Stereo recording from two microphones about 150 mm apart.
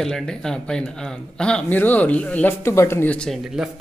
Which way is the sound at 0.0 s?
5° left (ahead or behind).